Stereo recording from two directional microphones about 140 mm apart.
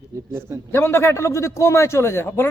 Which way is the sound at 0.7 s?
20° left (ahead or behind).